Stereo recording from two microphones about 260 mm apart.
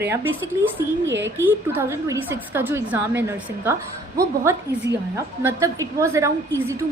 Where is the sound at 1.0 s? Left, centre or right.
Right.